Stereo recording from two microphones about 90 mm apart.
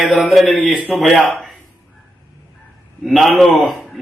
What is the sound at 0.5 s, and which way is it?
Speech, 5° left (ahead or behind).